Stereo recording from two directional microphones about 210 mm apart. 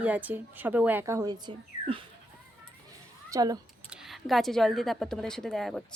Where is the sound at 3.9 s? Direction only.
Centre (ahead or behind).